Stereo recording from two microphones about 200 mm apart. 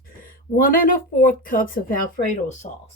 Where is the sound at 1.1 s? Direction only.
40° left (ahead or behind).